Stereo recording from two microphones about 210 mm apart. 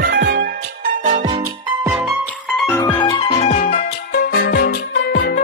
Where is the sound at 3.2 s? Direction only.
30° left (ahead or behind).